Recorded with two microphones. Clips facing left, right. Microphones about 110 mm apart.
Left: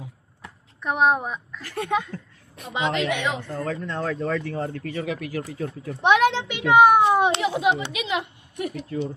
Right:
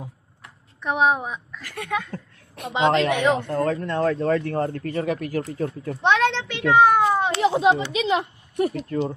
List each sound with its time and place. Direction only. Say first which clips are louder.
0.8 s a woman's voice: even; centre (ahead or behind)
1.6 s speech: left 3 dB; 30° left (ahead or behind)
2.7 s speech: right 5 dB; 30° right (ahead or behind)
3.4 s a child's voice: right 6 dB; 60° right (ahead or behind); by 5.9 s 45° right (ahead or behind)
6.0 s a child's voice: left 2 dB; 10° left (ahead or behind)
7.4 s speech: right 4 dB; 30° right (ahead or behind)